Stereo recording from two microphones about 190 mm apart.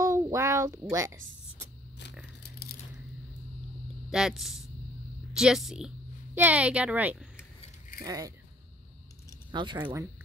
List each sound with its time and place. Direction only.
0.0 s a sound: 15° right (ahead or behind)
4.1 s a woman's voice: centre (ahead or behind)
8.0 s speech: 20° right (ahead or behind)
9.5 s speech: 25° right (ahead or behind)